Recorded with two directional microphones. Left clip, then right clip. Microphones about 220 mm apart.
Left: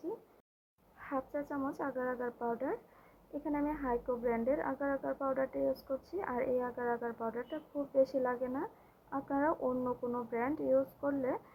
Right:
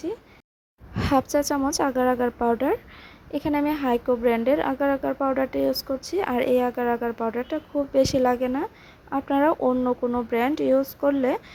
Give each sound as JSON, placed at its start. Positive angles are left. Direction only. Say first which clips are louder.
{"t": 0.9, "sound": "a woman's voice", "louder": "right 17 dB", "side_deg": -50}